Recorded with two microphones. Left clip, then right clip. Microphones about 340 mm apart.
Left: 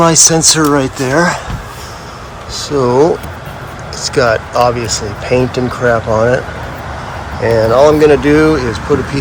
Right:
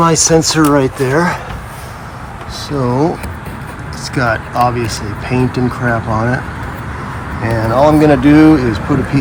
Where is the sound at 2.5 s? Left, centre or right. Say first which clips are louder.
Left 5 dB; centre.